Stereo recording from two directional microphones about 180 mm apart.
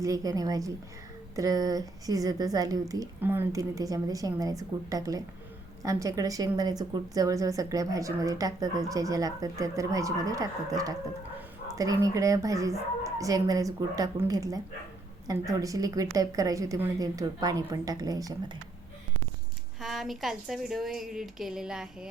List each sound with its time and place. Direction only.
0.0 s a woman's voice: 20° right (ahead or behind)
19.8 s a woman's voice: centre (ahead or behind)